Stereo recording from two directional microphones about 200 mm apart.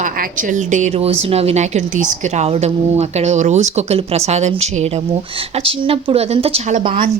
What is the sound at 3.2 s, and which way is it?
Speech, 35° right (ahead or behind).